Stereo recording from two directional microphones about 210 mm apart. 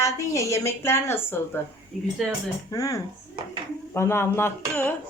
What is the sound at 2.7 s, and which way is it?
Speech, 15° left (ahead or behind).